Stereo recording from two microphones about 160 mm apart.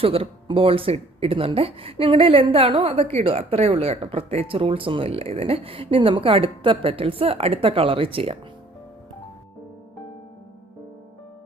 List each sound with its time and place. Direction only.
0.0 s speech: 35° right (ahead or behind)